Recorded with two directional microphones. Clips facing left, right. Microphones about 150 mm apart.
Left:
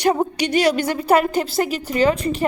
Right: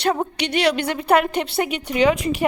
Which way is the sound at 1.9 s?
Centre (ahead or behind).